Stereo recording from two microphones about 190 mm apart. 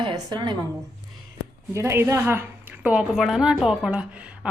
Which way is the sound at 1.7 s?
15° right (ahead or behind).